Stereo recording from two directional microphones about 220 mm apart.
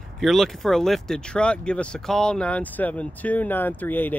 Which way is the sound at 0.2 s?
Centre (ahead or behind).